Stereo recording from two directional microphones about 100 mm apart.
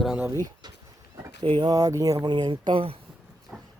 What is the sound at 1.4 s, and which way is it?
Speech, 65° right (ahead or behind).